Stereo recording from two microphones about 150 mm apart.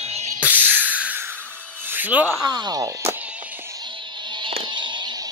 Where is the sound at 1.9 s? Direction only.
10° right (ahead or behind).